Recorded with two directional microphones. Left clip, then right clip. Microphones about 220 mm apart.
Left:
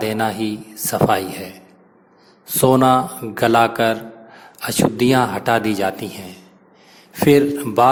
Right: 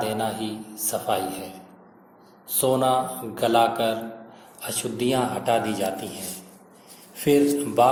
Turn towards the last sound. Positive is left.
turn(degrees=45)  # may be behind; listen again after turning